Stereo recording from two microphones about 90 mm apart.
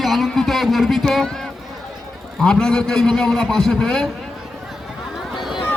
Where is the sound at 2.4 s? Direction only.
5° left (ahead or behind).